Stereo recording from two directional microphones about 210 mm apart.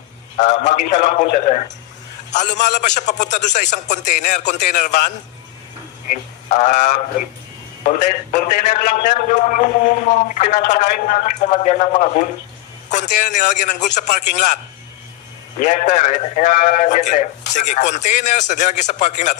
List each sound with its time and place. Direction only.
0.4 s a man's voice: 35° left (ahead or behind)
6.5 s a man's voice: 35° left (ahead or behind)
15.6 s a man's voice: 35° left (ahead or behind)